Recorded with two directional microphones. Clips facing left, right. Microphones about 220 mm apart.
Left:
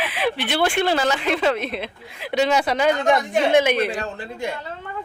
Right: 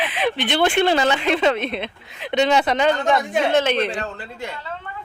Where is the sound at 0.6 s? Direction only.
25° right (ahead or behind).